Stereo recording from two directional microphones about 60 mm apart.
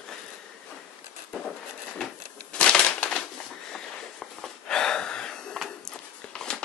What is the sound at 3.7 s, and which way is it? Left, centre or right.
Wheeze, centre.